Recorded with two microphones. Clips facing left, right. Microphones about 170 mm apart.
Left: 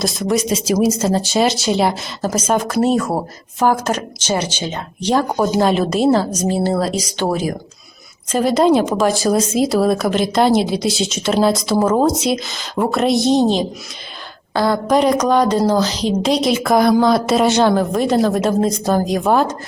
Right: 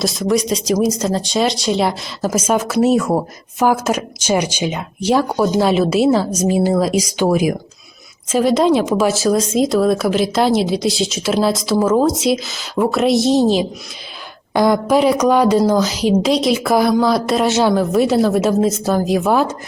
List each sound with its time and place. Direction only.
0.0 s speech: centre (ahead or behind)
8.3 s speech: centre (ahead or behind)
14.5 s speech: 15° right (ahead or behind)